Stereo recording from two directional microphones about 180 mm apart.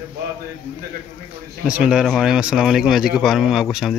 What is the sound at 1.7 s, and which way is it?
Speech, 5° right (ahead or behind).